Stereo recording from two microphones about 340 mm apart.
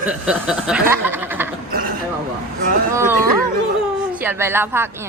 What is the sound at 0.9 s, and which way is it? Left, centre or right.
Speech, centre.